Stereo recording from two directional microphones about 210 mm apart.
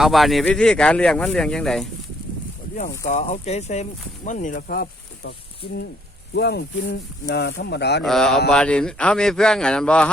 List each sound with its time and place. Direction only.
0.0 s speech: centre (ahead or behind)
3.1 s speech: 30° left (ahead or behind); by 5.3 s 50° left (ahead or behind)
6.3 s speech: 50° left (ahead or behind)
8.0 s speech: centre (ahead or behind)